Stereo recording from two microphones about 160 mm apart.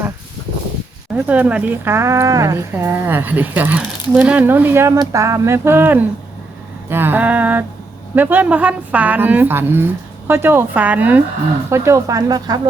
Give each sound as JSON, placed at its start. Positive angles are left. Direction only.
{"t": 1.1, "sound": "a woman's voice", "side_deg": -10}